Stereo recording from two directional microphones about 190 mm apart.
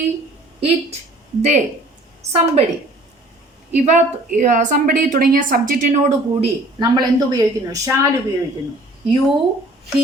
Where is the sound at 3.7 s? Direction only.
40° right (ahead or behind).